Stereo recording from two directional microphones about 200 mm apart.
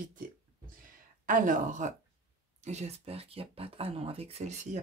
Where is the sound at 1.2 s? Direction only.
40° right (ahead or behind).